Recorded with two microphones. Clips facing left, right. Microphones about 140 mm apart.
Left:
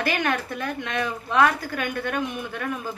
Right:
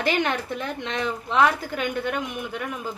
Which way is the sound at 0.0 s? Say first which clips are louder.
Right 1 dB; 20° right (ahead or behind).